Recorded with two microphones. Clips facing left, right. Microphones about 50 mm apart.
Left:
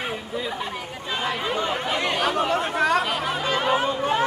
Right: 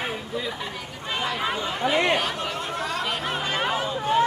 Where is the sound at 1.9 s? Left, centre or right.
Centre.